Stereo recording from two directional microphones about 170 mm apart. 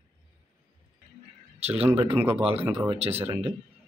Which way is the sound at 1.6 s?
35° right (ahead or behind).